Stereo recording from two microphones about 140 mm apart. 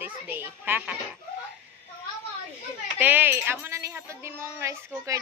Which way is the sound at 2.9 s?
15° right (ahead or behind).